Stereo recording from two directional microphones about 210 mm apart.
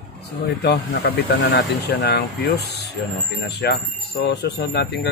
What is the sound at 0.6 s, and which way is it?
Speech, 50° left (ahead or behind).